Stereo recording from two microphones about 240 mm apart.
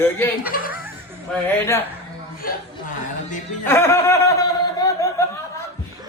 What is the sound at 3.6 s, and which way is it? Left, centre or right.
Music, centre.